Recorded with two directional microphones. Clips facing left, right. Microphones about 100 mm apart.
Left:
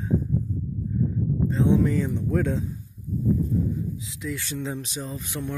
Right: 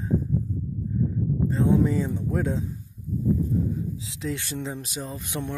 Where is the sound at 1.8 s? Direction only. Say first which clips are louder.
Left 1 dB; 15° right (ahead or behind).